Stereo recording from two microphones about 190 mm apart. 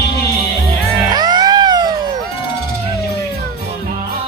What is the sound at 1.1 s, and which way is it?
Music, 20° right (ahead or behind).